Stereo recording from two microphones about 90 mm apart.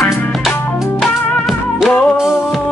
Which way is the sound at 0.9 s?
Centre (ahead or behind).